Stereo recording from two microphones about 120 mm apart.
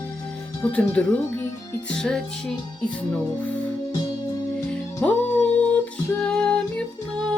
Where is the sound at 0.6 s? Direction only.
10° left (ahead or behind).